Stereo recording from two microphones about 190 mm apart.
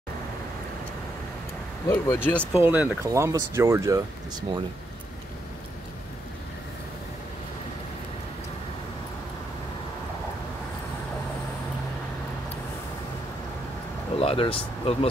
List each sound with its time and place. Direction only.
1.9 s speech: 10° left (ahead or behind)
2.5 s speech: 10° right (ahead or behind)
14.2 s speech: 30° left (ahead or behind)